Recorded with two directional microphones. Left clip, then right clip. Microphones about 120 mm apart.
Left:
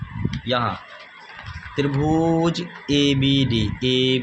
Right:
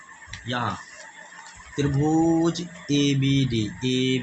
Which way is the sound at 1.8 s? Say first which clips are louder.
Left 2 dB; 70° left (ahead or behind).